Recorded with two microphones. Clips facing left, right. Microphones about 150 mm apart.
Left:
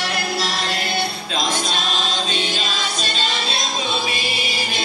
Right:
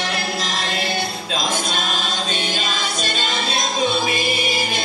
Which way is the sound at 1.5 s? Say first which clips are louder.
Even; 50° right (ahead or behind).